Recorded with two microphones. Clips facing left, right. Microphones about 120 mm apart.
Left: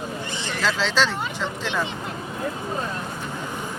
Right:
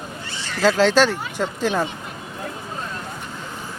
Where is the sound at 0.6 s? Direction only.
50° right (ahead or behind).